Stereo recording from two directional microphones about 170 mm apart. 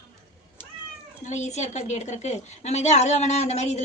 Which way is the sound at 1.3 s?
40° left (ahead or behind).